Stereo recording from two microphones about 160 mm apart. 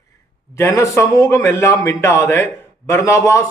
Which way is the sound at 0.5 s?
20° left (ahead or behind).